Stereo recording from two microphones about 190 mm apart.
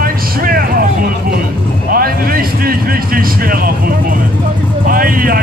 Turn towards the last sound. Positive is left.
turn(degrees=-50)  # may be behind; listen again after turning